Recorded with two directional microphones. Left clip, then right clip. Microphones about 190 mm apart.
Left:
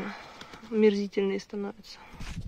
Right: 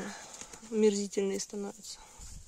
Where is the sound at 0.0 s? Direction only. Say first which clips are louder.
Left 4 dB; 15° right (ahead or behind).